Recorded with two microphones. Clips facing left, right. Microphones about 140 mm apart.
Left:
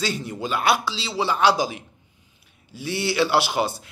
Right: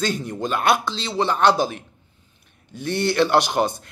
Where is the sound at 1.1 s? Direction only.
10° left (ahead or behind).